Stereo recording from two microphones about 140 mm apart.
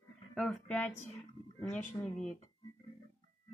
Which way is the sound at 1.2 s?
10° left (ahead or behind).